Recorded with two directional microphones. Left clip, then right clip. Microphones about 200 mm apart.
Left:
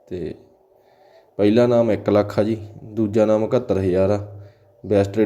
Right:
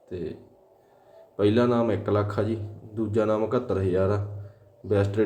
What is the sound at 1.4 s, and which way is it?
Speech, 30° left (ahead or behind).